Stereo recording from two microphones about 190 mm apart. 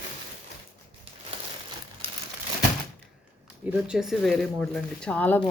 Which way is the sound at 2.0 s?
30° right (ahead or behind).